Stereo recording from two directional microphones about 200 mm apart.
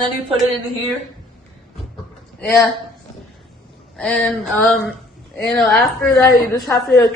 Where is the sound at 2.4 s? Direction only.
5° left (ahead or behind).